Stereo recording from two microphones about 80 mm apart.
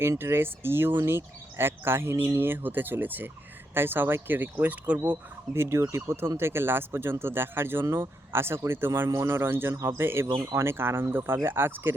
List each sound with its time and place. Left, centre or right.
0.0 s speech: right
5.5 s speech: right